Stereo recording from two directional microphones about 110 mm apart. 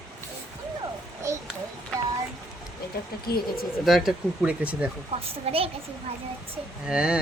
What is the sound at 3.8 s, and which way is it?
Speech, centre (ahead or behind).